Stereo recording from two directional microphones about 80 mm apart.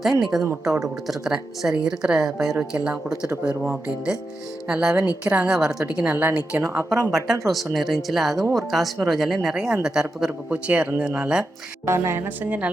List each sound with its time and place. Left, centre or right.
0.0 s speech: centre
6.6 s speech: right
7.4 s speech: centre
10.7 s speech: right
11.9 s speech: right